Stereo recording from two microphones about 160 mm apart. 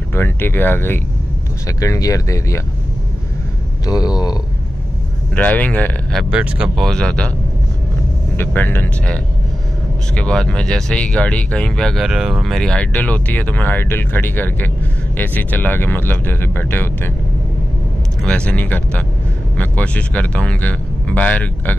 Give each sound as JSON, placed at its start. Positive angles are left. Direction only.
{"t": 0.1, "sound": "speech", "side_deg": 15}
{"t": 3.8, "sound": "a sound", "side_deg": 25}
{"t": 5.3, "sound": "speech", "side_deg": 10}
{"t": 6.3, "sound": "speech", "side_deg": -5}
{"t": 8.4, "sound": "speech", "side_deg": 10}
{"t": 18.2, "sound": "speech", "side_deg": 5}